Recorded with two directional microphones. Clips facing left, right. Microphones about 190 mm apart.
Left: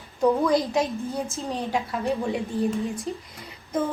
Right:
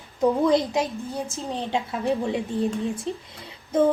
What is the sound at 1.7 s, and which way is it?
A woman's voice, 20° right (ahead or behind).